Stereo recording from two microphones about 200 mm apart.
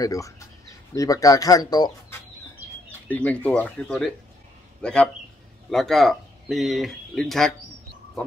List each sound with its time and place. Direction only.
0.0 s speech: 15° left (ahead or behind)
3.1 s a man's voice: 10° left (ahead or behind)